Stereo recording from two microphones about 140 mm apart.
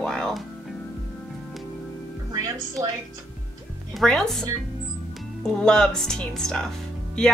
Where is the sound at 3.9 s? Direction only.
5° left (ahead or behind).